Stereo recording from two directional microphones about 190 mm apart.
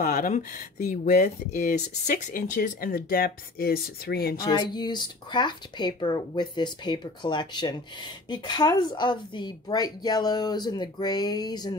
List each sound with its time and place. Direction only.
0.0 s speech: 45° left (ahead or behind)
4.4 s speech: 20° left (ahead or behind)